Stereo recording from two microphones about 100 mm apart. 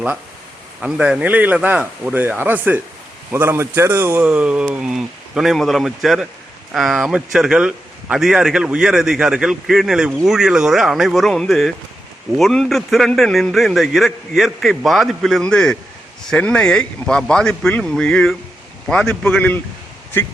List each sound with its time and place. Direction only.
0.8 s a man's voice: 10° right (ahead or behind); by 19.1 s 10° left (ahead or behind)
19.4 s speech: 20° left (ahead or behind)